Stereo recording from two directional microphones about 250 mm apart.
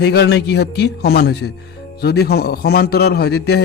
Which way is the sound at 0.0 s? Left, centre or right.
Left.